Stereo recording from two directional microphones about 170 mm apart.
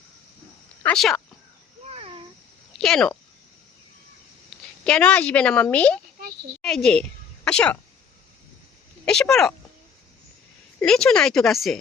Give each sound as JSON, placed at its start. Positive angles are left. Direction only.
{"t": 0.9, "sound": "speech", "side_deg": 0}
{"t": 1.9, "sound": "a sound", "side_deg": -35}
{"t": 2.7, "sound": "speech", "side_deg": 0}
{"t": 4.8, "sound": "a woman's voice", "side_deg": 5}
{"t": 6.6, "sound": "a sound", "side_deg": 5}
{"t": 9.3, "sound": "speech", "side_deg": 5}
{"t": 10.8, "sound": "speech", "side_deg": 5}